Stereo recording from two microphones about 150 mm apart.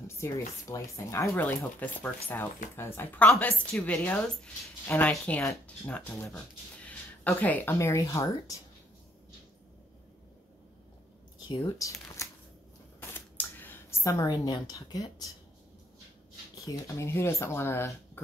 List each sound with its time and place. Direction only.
0.2 s speech: 20° left (ahead or behind)
11.4 s speech: 25° left (ahead or behind)
13.1 s scissors: 15° left (ahead or behind)
14.3 s speech: 30° left (ahead or behind)
16.6 s speech: 20° left (ahead or behind)